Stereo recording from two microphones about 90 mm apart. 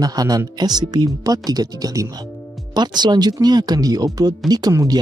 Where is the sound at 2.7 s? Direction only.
55° right (ahead or behind).